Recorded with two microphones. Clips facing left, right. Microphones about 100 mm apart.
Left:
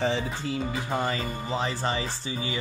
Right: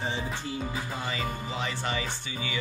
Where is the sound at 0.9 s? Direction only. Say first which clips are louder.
Left 6 dB; 45° left (ahead or behind).